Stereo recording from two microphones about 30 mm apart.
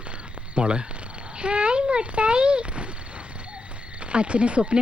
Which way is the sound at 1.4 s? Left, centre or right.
Right.